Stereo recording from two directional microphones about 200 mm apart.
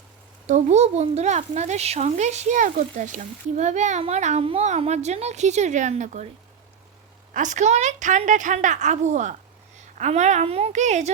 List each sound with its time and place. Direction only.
0.4 s speech: 35° right (ahead or behind)
7.3 s a woman's voice: 40° right (ahead or behind)